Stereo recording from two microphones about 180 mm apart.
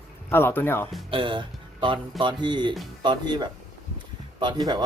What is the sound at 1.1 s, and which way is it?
Speech, 30° right (ahead or behind).